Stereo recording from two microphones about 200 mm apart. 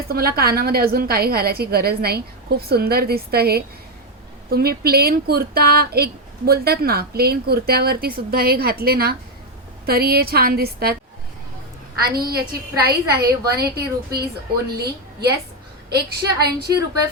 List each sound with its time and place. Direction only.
0.1 s a woman's voice: 50° right (ahead or behind)
12.0 s a woman's voice: 50° right (ahead or behind)